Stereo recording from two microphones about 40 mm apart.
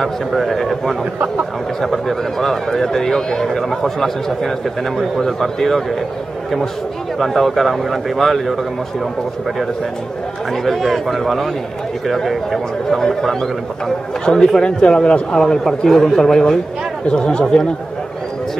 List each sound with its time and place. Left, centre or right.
0.0 s a man's voice: centre
7.2 s speech: centre
10.5 s a man's voice: centre; by 15.1 s left
15.3 s a man's voice: centre